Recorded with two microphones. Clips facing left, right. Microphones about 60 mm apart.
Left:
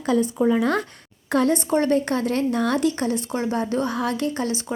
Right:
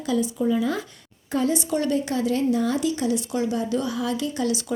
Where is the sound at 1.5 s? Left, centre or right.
Left.